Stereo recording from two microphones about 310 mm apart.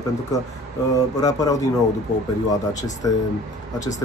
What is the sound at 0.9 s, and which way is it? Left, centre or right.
Speech, centre.